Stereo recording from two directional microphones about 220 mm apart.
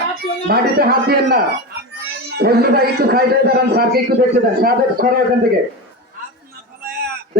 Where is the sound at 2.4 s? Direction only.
45° right (ahead or behind).